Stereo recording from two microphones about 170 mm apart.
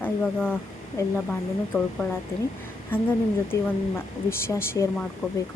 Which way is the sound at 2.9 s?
10° left (ahead or behind).